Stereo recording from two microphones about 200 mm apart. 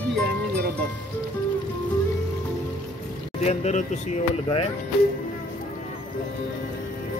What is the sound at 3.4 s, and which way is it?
Speech, 35° left (ahead or behind).